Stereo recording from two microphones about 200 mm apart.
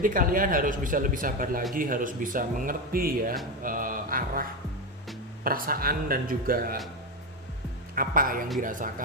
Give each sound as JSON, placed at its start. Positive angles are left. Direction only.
{"t": 0.0, "sound": "speech", "side_deg": -45}
{"t": 7.9, "sound": "speech", "side_deg": -45}